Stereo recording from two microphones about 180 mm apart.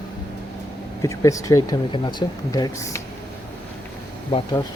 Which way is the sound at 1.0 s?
15° left (ahead or behind).